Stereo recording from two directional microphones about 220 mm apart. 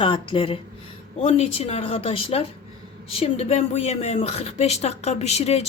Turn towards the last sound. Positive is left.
turn(degrees=30)  # may be behind; listen again after turning